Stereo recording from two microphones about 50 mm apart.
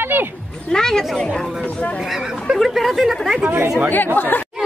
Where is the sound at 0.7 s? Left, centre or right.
Centre.